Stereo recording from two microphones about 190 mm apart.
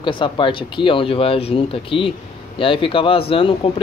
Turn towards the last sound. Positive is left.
turn(degrees=30)  # may be behind; listen again after turning